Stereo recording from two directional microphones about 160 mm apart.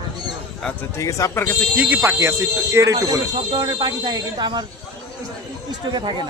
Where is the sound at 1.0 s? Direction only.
20° left (ahead or behind).